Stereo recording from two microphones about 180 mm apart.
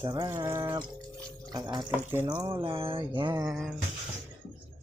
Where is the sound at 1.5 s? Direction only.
20° right (ahead or behind).